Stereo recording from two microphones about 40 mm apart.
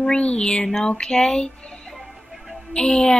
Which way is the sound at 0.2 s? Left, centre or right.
Left.